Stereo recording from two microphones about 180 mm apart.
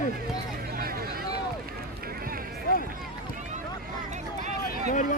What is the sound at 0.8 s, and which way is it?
Speech, 55° right (ahead or behind).